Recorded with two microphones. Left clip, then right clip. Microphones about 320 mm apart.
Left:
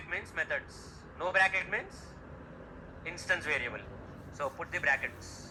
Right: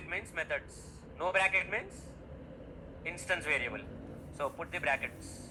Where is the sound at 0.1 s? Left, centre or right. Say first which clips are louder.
Left 2 dB; right.